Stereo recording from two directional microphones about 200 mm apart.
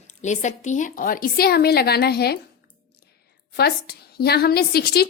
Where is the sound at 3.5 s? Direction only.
50° left (ahead or behind).